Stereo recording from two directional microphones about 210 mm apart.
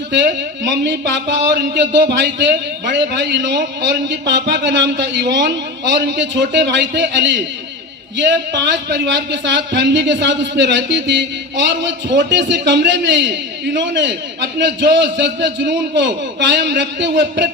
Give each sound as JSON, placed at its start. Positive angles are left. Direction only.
{"t": 0.7, "sound": "speech", "side_deg": -60}